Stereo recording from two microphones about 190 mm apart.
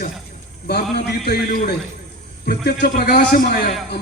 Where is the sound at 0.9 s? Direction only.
55° left (ahead or behind).